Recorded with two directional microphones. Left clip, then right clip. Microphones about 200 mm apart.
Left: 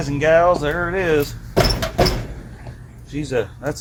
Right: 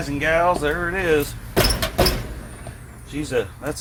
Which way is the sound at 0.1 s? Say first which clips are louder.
Left 4 dB; 40° left (ahead or behind).